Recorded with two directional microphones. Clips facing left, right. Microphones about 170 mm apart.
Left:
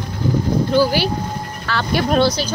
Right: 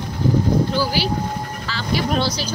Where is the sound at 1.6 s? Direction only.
60° left (ahead or behind).